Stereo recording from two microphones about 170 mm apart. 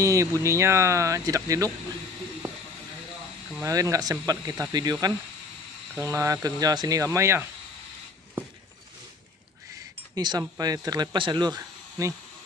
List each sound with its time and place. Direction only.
0.0 s speech: 20° right (ahead or behind)
3.6 s speech: 20° right (ahead or behind)
5.9 s speech: 15° right (ahead or behind)
10.1 s speech: 25° right (ahead or behind)